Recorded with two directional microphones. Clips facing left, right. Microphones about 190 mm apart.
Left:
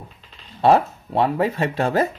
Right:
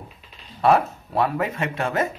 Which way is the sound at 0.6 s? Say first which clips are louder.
Left 2 dB; 30° left (ahead or behind).